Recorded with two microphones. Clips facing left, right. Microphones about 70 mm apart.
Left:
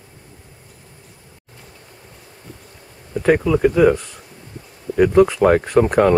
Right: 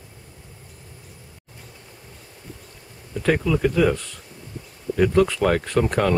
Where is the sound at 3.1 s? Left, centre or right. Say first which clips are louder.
Left 5 dB; centre.